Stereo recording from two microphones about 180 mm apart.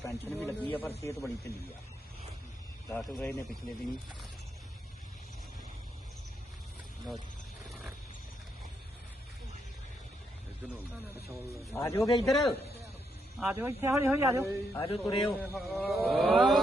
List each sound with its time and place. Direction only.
0.0 s speech: 10° left (ahead or behind)
2.9 s a man's voice: 5° left (ahead or behind)
11.7 s speech: 15° left (ahead or behind)
12.2 s a man's voice: centre (ahead or behind)
13.4 s speech: 10° right (ahead or behind)
14.7 s a man's voice: 30° left (ahead or behind)
15.3 s a man's voice: centre (ahead or behind)